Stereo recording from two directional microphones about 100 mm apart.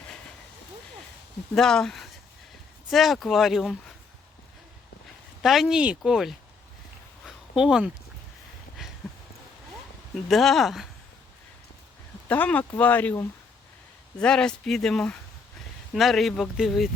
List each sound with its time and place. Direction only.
1.5 s speech: 5° left (ahead or behind)
5.4 s speech: centre (ahead or behind)
7.3 s a sound: 5° right (ahead or behind)
10.2 s speech: centre (ahead or behind)
12.3 s speech: 15° left (ahead or behind)
14.2 s speech: 10° left (ahead or behind)